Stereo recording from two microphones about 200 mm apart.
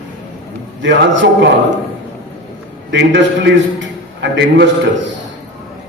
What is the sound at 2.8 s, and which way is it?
A man's voice, 60° right (ahead or behind).